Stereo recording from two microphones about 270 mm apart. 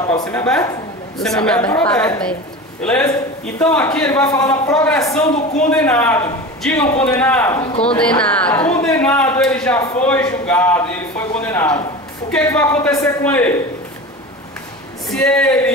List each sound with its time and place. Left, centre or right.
0.0 s a man's voice: centre
15.0 s speech: centre